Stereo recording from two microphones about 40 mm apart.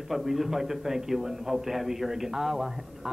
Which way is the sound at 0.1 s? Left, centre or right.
Centre.